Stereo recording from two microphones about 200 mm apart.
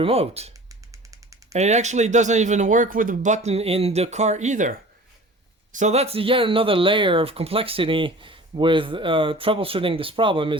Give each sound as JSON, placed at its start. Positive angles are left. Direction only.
{"t": 0.0, "sound": "speech", "side_deg": -30}
{"t": 0.7, "sound": "drum", "side_deg": -15}
{"t": 1.5, "sound": "speech", "side_deg": -35}
{"t": 5.7, "sound": "speech", "side_deg": -35}